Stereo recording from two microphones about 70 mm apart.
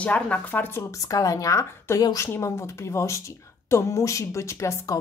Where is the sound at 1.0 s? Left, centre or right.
Left.